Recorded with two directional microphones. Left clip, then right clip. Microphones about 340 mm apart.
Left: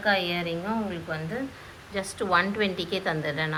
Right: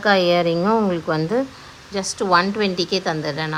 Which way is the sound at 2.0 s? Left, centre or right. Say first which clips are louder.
Right 7 dB; centre.